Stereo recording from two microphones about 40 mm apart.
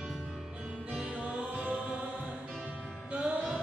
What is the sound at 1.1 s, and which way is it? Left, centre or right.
Choir, right.